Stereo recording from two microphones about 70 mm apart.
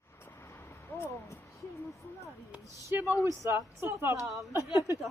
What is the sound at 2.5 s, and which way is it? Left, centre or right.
Speech, right.